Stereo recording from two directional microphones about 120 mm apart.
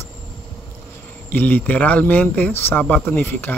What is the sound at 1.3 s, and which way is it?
Speech, 15° left (ahead or behind).